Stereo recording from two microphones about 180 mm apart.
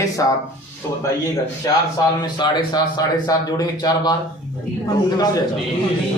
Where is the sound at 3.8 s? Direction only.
20° left (ahead or behind).